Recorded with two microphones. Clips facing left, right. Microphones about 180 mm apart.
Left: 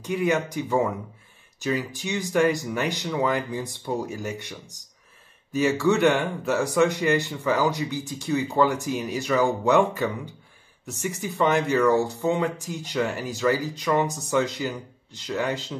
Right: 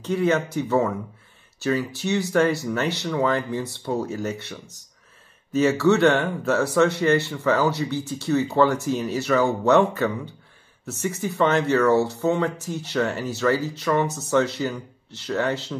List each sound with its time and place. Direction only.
0.0 s speech: 15° left (ahead or behind)